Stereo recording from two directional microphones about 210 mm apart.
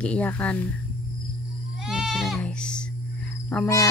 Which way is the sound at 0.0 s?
5° left (ahead or behind).